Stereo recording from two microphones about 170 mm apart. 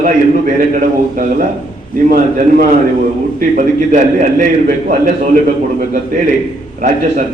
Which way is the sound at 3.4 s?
45° right (ahead or behind).